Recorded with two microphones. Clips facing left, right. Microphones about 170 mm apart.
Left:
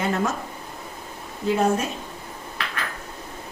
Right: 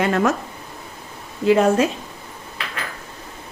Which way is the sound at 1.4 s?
90° right.